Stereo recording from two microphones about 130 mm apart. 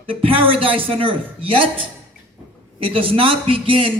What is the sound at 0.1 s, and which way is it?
Speech, 45° right (ahead or behind).